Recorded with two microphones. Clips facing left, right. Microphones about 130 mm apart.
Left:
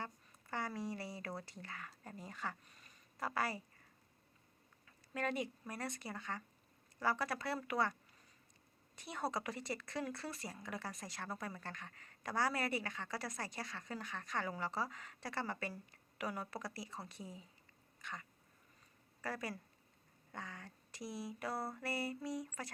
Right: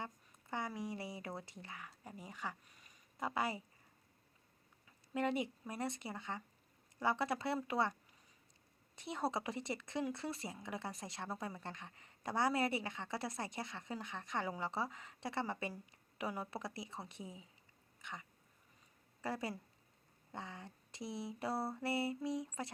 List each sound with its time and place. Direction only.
0.0 s a sound: 20° right (ahead or behind)
1.4 s speech: 20° right (ahead or behind)
5.1 s speech: 20° right (ahead or behind)
9.0 s speech: 25° right (ahead or behind)